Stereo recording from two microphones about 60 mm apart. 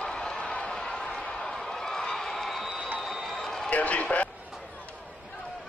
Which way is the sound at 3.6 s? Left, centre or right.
Left.